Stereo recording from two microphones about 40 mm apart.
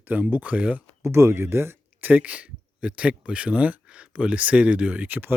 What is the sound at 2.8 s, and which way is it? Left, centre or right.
Speech, right.